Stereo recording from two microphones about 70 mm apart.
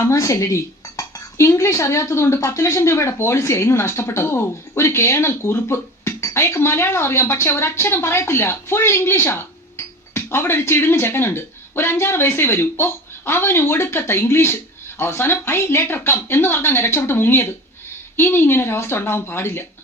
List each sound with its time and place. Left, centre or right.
0.0 s speech: left